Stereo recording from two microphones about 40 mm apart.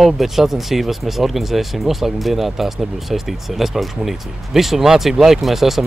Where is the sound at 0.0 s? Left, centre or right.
Centre.